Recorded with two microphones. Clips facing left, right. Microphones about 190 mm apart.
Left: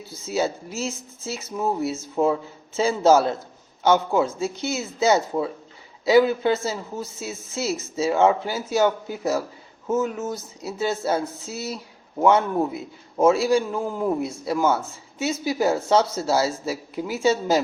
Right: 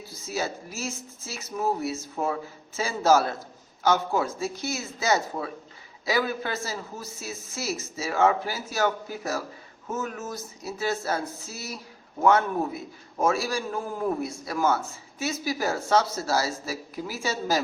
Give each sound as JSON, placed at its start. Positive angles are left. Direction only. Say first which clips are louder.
{"t": 0.3, "sound": "a man's voice", "louder": "left 6 dB", "side_deg": 25}